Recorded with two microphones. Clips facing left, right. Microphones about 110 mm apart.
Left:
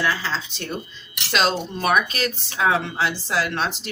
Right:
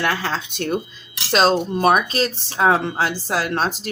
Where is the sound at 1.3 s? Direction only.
40° right (ahead or behind).